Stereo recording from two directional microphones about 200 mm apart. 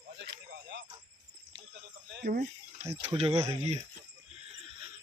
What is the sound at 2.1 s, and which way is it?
Speech, 45° right (ahead or behind).